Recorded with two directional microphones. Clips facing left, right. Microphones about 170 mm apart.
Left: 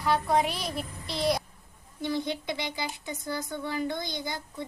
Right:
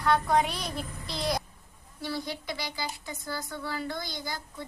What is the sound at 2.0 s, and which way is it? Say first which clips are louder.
Speech: left 4 dB; 20° left (ahead or behind).